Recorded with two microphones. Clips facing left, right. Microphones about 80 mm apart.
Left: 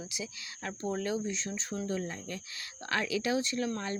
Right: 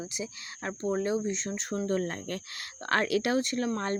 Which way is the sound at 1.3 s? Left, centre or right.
Right.